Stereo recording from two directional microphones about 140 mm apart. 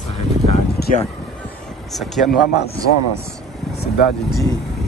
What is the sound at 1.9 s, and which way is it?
Speech, centre (ahead or behind).